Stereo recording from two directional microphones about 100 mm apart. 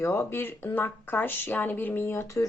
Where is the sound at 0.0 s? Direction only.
25° left (ahead or behind).